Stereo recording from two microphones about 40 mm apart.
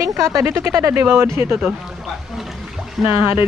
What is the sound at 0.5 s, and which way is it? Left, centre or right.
Speech, right.